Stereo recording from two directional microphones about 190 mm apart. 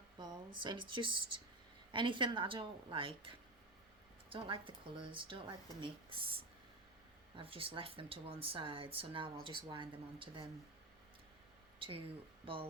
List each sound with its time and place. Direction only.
0.2 s speech: 25° right (ahead or behind)
11.8 s speech: 25° right (ahead or behind)